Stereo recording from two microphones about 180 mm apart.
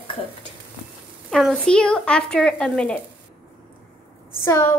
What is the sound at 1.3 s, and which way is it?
A woman's voice, 5° left (ahead or behind).